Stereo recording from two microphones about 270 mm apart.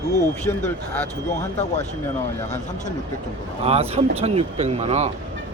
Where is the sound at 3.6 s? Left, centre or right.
Right.